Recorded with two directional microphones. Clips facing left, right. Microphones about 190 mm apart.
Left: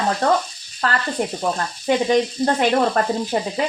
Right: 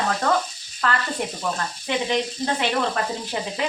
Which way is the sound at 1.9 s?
45° left (ahead or behind).